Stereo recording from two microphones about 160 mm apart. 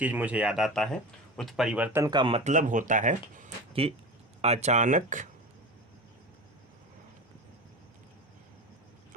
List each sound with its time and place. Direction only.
0.0 s speech: 10° right (ahead or behind)
2.0 s speech: 30° right (ahead or behind); by 3.5 s 50° right (ahead or behind)
3.7 s speech: 35° right (ahead or behind)